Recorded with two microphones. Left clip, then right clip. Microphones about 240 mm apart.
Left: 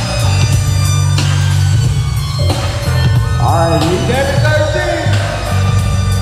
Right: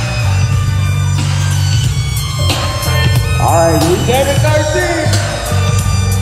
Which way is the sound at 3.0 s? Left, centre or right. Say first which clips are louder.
Right 2 dB; right.